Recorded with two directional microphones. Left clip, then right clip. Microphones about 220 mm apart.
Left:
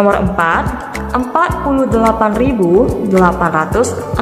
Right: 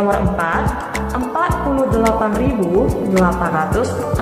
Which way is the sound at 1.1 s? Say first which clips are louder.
Left 6 dB; 45° left (ahead or behind).